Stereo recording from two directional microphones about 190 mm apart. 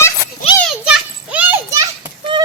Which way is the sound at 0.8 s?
5° right (ahead or behind).